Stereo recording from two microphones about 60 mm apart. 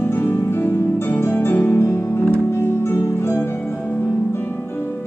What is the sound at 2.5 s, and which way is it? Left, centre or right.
Music, left.